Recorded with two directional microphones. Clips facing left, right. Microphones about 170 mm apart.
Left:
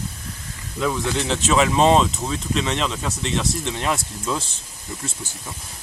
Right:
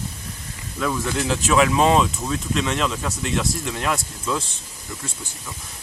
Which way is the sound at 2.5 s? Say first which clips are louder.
Right 1 dB; centre (ahead or behind).